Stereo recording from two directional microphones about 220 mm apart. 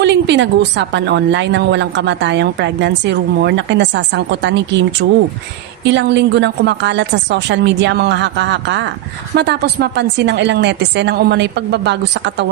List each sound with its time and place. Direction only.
0.0 s a woman's voice: 50° right (ahead or behind)